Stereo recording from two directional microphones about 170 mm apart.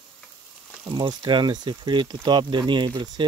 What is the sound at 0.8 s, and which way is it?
Speech, 25° right (ahead or behind).